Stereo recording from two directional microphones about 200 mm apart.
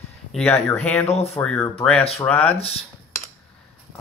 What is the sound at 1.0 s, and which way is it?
Speech, 30° left (ahead or behind).